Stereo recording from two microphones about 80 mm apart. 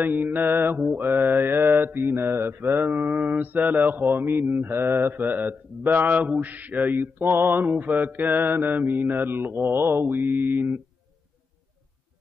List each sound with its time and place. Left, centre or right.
0.0 s speech: right
1.3 s mantra: right
1.7 s speech: right
7.3 s mantra: right
7.6 s speech: centre
9.8 s mantra: right
10.4 s speech: right